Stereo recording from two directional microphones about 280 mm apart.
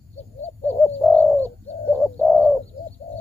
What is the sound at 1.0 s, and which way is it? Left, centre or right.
Bird, centre.